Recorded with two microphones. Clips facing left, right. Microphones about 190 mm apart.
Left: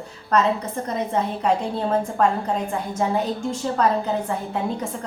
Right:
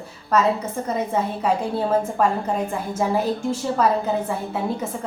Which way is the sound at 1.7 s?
5° right (ahead or behind).